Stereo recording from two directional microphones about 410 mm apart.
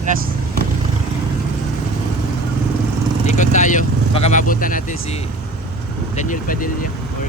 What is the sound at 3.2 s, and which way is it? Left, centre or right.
Speech, centre.